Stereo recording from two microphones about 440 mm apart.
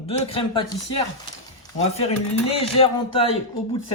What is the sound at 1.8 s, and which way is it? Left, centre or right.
Speech, centre.